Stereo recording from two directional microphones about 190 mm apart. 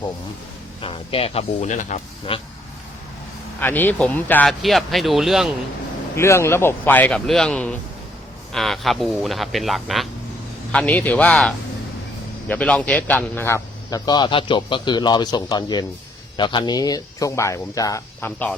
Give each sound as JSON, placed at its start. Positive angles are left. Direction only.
{"t": 0.8, "sound": "speech", "side_deg": 30}
{"t": 3.6, "sound": "speech", "side_deg": 10}
{"t": 6.1, "sound": "a man's voice", "side_deg": 15}